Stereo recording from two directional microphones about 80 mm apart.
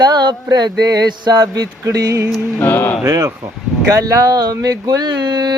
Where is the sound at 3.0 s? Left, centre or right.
Right.